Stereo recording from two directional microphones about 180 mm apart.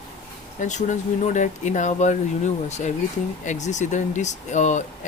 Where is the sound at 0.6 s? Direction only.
40° left (ahead or behind).